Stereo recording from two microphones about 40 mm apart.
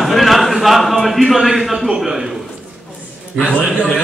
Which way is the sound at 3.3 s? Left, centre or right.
Left.